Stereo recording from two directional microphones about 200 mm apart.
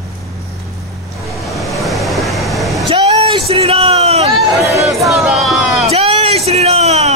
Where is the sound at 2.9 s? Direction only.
25° right (ahead or behind).